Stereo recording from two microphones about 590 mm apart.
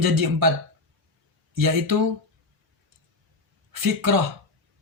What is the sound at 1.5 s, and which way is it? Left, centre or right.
Speech, right.